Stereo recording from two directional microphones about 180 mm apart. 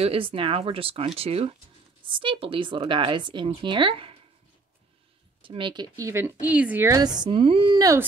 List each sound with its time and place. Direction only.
0.0 s speech: 30° right (ahead or behind)
5.4 s speech: 30° right (ahead or behind)